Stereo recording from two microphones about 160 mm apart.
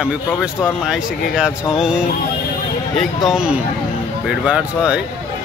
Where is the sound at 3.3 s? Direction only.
5° right (ahead or behind).